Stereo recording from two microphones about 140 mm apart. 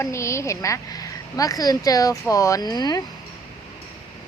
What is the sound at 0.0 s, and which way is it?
Speech, 20° left (ahead or behind).